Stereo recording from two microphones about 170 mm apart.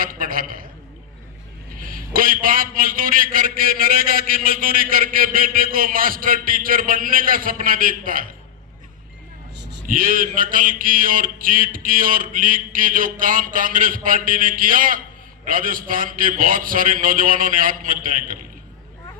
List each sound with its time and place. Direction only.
0.0 s a man's voice: 55° right (ahead or behind)
1.8 s a man's voice: 55° right (ahead or behind)
9.6 s a sound: 85° right
9.8 s mantra: 55° right (ahead or behind)